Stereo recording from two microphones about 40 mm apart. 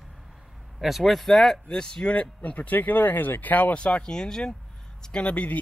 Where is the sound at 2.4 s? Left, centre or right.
Left.